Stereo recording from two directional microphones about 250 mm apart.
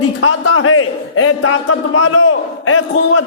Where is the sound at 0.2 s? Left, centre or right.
Left.